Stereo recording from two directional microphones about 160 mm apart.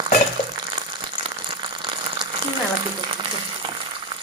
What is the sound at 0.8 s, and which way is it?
Frying, 30° right (ahead or behind).